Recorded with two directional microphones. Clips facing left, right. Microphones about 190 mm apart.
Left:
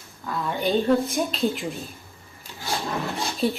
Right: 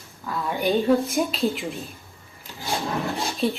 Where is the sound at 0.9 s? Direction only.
Centre (ahead or behind).